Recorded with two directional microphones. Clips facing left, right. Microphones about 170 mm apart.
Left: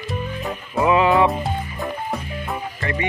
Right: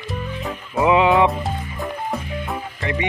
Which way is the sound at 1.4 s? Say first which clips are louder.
Left 1 dB; centre (ahead or behind).